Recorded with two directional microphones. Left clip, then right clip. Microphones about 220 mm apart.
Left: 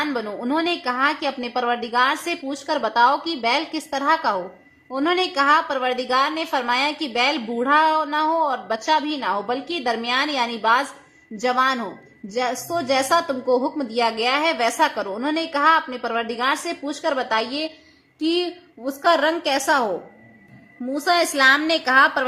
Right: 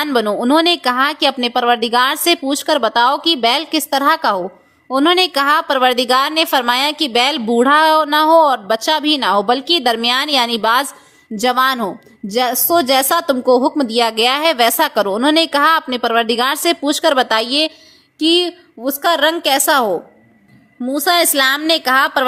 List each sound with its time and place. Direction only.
0.0 s a woman's voice: 45° right (ahead or behind)